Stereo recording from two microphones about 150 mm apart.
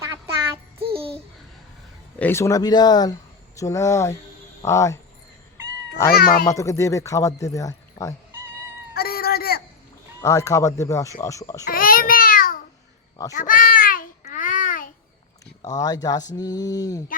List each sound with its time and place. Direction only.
0.0 s child singing: 20° right (ahead or behind)
0.8 s babbling: 40° right (ahead or behind)
2.1 s speech: 15° left (ahead or behind)
6.1 s speech: 85° left
6.5 s speech: 20° left (ahead or behind)
9.0 s a sound: 90° left
10.2 s speech: 20° left (ahead or behind)
11.6 s a sound: 75° left (ahead or behind)
13.3 s babbling: 65° left (ahead or behind)
15.6 s speech: 25° left (ahead or behind)